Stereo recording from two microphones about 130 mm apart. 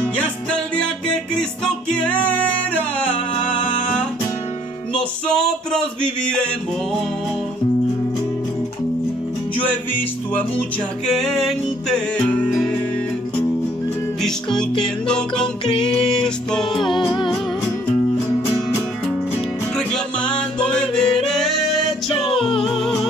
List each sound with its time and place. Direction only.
0.0 s music: 10° left (ahead or behind)
5.3 s music: 5° left (ahead or behind)
11.1 s music: centre (ahead or behind)
14.2 s music: 5° left (ahead or behind)
19.9 s music: 10° left (ahead or behind)
20.7 s yodeling: 5° left (ahead or behind)
22.2 s music: 45° left (ahead or behind)
22.7 s music: centre (ahead or behind)